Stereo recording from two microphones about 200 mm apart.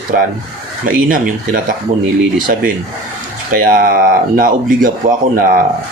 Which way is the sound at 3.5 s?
45° right (ahead or behind).